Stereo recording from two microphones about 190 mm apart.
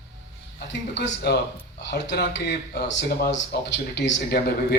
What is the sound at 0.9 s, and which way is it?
A man's voice, 65° left (ahead or behind).